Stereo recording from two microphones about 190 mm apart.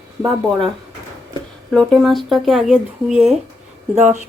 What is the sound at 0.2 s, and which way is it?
Speech, 20° right (ahead or behind).